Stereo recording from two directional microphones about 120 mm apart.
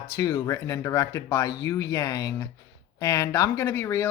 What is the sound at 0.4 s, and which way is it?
Speech, 25° left (ahead or behind).